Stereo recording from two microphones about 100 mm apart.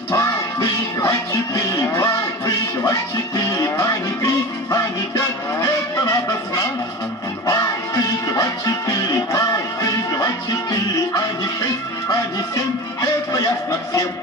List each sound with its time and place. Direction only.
0.1 s music: 30° left (ahead or behind)
13.0 s music: 35° left (ahead or behind)